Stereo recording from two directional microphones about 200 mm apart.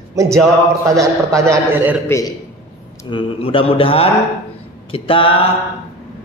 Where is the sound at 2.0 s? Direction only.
15° left (ahead or behind).